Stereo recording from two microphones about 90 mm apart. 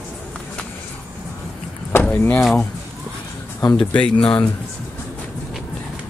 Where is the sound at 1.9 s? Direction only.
20° left (ahead or behind).